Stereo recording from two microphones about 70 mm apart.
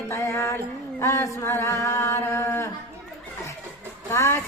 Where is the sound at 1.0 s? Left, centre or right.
Left.